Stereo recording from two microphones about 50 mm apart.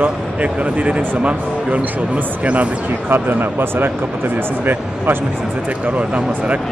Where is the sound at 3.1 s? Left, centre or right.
Right.